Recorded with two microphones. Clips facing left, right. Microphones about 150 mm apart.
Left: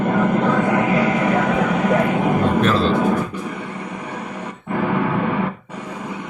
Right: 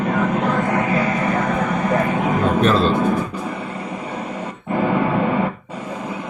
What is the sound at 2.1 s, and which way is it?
Vehicle, 60° left (ahead or behind).